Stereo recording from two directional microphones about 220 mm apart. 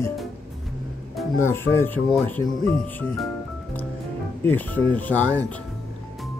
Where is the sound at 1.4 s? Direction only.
10° left (ahead or behind).